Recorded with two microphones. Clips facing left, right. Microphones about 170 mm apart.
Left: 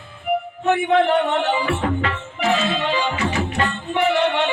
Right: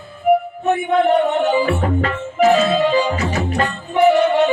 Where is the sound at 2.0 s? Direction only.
40° right (ahead or behind).